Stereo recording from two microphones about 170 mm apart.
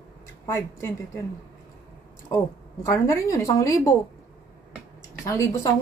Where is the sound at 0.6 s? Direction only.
15° left (ahead or behind).